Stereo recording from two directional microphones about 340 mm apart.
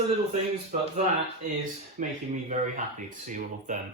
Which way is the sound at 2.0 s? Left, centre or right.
Right.